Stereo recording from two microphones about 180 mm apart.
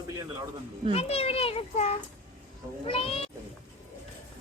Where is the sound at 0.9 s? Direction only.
35° left (ahead or behind).